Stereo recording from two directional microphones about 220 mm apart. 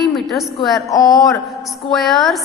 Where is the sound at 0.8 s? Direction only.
15° left (ahead or behind).